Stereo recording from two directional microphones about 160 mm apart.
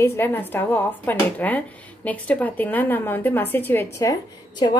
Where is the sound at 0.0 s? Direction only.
15° left (ahead or behind).